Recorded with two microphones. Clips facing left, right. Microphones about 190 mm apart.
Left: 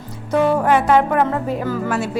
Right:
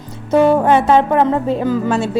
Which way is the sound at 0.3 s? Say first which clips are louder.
Right 4 dB; 25° right (ahead or behind).